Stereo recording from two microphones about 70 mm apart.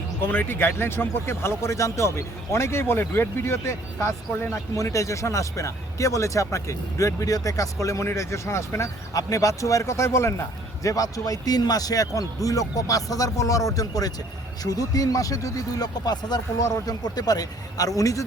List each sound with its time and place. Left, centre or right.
0.2 s speech: left
4.7 s speech: left
9.1 s speech: left
10.8 s speech: left